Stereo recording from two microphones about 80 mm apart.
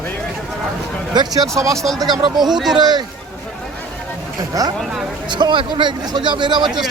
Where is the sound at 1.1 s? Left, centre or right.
Right.